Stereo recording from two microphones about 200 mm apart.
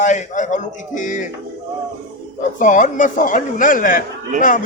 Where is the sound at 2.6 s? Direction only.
40° left (ahead or behind).